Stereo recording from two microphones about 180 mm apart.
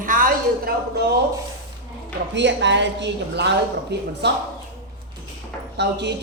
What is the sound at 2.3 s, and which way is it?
A man's voice, 80° right.